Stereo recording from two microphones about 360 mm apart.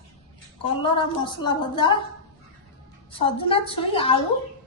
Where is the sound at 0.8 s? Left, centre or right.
Centre.